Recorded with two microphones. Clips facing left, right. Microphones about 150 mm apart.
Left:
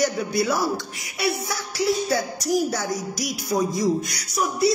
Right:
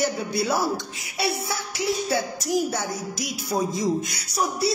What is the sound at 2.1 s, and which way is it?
Speech, 25° right (ahead or behind).